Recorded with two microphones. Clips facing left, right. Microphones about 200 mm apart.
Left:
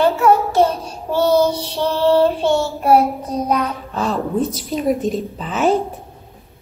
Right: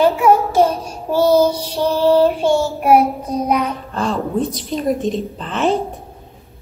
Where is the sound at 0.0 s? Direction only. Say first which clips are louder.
Right 1 dB; 10° right (ahead or behind).